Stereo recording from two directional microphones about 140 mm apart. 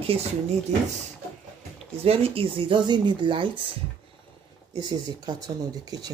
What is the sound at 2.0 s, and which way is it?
Speech, 45° right (ahead or behind).